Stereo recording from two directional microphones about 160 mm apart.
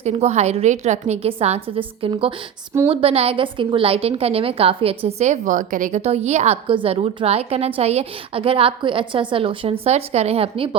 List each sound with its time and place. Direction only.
0.0 s a woman's voice: 40° right (ahead or behind)
6.0 s a woman's voice: 40° right (ahead or behind)